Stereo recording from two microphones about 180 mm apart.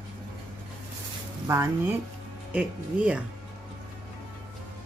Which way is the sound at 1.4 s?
15° right (ahead or behind).